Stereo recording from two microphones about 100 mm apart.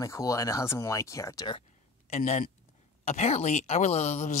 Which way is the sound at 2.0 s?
90° left.